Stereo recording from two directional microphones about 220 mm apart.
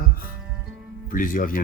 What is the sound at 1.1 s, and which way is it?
Speech, 40° left (ahead or behind).